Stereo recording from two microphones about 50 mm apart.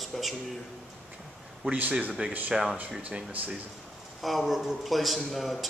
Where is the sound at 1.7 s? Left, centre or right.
Right.